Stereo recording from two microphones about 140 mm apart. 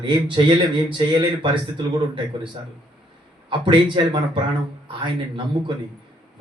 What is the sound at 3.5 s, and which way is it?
Speech, 35° right (ahead or behind).